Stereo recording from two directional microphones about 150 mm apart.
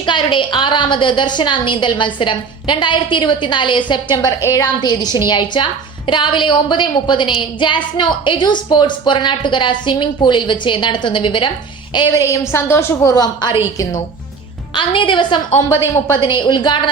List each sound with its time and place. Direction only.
0.0 s a woman's voice: 35° left (ahead or behind)
14.8 s a woman's voice: 35° left (ahead or behind)